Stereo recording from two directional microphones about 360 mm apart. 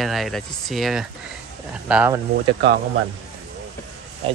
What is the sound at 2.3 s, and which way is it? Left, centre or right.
Speech, right.